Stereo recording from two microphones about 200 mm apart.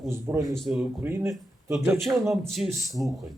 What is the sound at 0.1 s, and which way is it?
Speech, 15° right (ahead or behind).